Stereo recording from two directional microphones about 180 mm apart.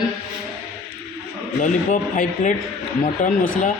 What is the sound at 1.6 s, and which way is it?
Speech, 45° left (ahead or behind).